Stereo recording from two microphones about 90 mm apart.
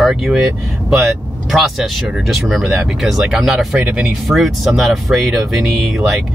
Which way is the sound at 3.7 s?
20° right (ahead or behind).